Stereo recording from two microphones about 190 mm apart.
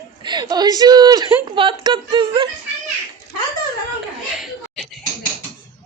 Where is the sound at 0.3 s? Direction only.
25° right (ahead or behind).